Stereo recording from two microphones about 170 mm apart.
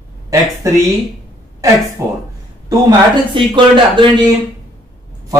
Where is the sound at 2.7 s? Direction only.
25° right (ahead or behind).